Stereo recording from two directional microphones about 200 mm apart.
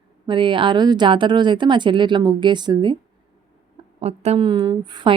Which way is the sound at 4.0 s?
30° right (ahead or behind).